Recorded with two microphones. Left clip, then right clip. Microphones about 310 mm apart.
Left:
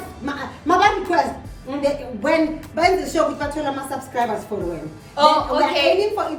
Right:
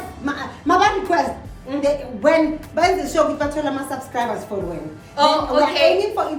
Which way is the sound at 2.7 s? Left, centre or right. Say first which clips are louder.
Right 1 dB; centre.